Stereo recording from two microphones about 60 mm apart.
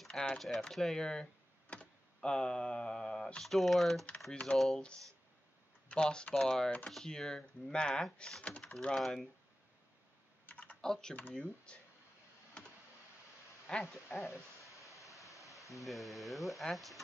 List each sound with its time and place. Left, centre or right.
0.1 s speech: centre
3.5 s speech: centre
4.3 s speech: centre
4.6 s speech: centre
5.9 s speech: centre
9.0 s speech: centre
10.4 s typing: left
10.8 s speech: centre
13.7 s speech: centre
14.0 s speech: left
14.7 s a sound: left
15.3 s a sound: centre
15.7 s speech: centre